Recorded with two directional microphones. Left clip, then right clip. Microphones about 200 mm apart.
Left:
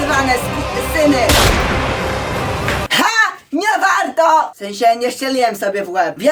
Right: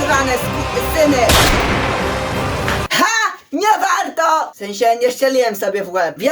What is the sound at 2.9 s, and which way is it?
Music, 20° left (ahead or behind).